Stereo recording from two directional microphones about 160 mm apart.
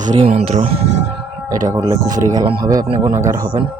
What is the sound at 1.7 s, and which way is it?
Speech, 20° right (ahead or behind).